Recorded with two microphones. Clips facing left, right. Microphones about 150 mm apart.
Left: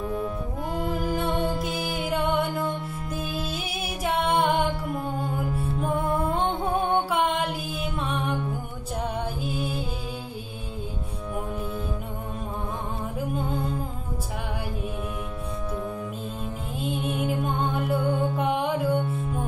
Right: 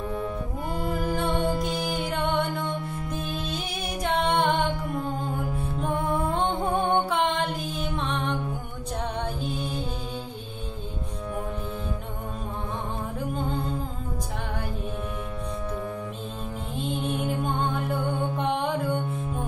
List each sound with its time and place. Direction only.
0.7 s music: centre (ahead or behind)
5.8 s music: centre (ahead or behind)
9.4 s music: 5° left (ahead or behind)
16.7 s music: 5° left (ahead or behind)